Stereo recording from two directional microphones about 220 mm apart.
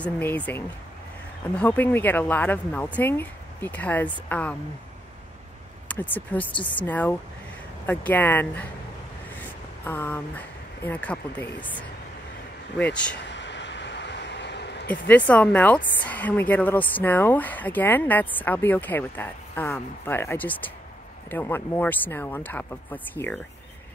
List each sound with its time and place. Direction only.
0.0 s a woman's voice: 5° left (ahead or behind)
5.9 s a woman's voice: 5° left (ahead or behind)
9.8 s a woman's voice: 10° left (ahead or behind)
13.1 s a sound: 55° left (ahead or behind)
14.9 s a woman's voice: 5° left (ahead or behind)